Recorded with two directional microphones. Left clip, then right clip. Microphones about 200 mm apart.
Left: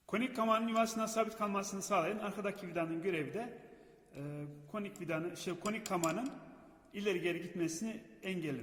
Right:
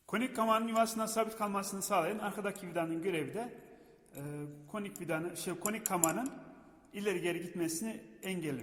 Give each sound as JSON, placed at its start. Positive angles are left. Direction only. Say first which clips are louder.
{"t": 0.1, "sound": "a man's voice", "louder": "right 2 dB", "side_deg": -15}